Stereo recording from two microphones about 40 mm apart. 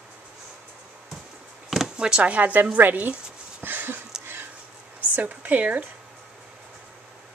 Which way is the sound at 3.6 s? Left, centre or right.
Right.